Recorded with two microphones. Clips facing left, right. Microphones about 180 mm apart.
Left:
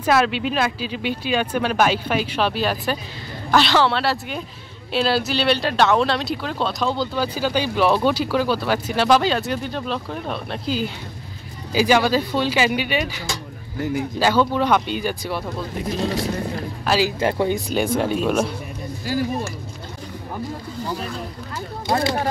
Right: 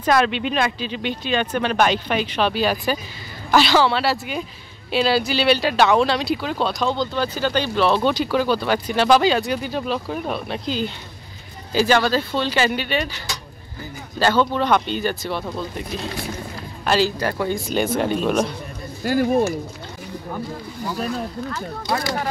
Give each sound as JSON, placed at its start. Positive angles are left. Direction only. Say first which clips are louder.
{"t": 0.0, "sound": "speech", "louder": "even", "side_deg": 5}
{"t": 13.7, "sound": "speech", "louder": "left 12 dB", "side_deg": 85}
{"t": 14.2, "sound": "speech", "louder": "right 1 dB", "side_deg": 10}
{"t": 16.8, "sound": "a man's voice", "louder": "right 1 dB", "side_deg": 5}
{"t": 17.2, "sound": "speech", "louder": "left 3 dB", "side_deg": 20}
{"t": 17.6, "sound": "speech", "louder": "even", "side_deg": -5}
{"t": 19.0, "sound": "speech", "louder": "right 4 dB", "side_deg": -55}
{"t": 21.8, "sound": "speech", "louder": "left 3 dB", "side_deg": 25}